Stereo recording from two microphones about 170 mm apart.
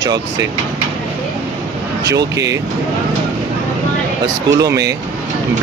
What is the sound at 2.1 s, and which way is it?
Speech, 20° right (ahead or behind).